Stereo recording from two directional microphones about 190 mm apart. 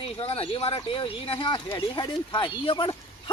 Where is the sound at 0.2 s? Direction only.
30° left (ahead or behind).